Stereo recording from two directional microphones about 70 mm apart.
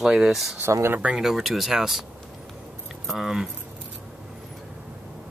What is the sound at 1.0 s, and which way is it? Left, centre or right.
Speech, centre.